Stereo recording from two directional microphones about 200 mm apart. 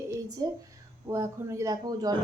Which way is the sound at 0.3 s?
20° right (ahead or behind).